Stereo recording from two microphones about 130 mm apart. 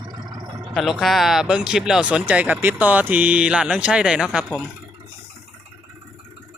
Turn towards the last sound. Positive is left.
turn(degrees=-5)  # may be behind; listen again after turning